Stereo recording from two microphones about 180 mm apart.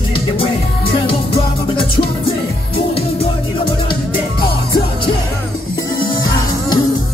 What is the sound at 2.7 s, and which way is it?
Music, 35° left (ahead or behind).